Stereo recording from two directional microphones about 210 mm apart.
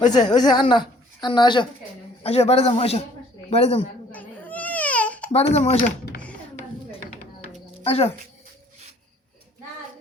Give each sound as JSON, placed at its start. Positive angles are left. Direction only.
{"t": 0.0, "sound": "a woman's voice", "side_deg": 35}
{"t": 0.3, "sound": "a woman's voice", "side_deg": 20}
{"t": 4.1, "sound": "baby cry", "side_deg": 10}
{"t": 5.3, "sound": "a woman's voice", "side_deg": 30}
{"t": 7.9, "sound": "a woman's voice", "side_deg": 30}